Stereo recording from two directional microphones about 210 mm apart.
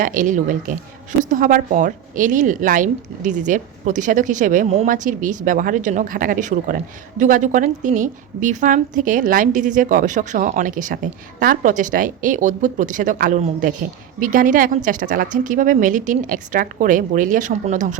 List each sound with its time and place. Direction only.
0.0 s a woman's voice: 40° right (ahead or behind)